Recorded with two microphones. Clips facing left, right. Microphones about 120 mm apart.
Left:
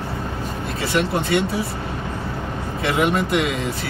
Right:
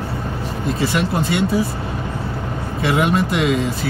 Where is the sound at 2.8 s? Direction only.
Centre (ahead or behind).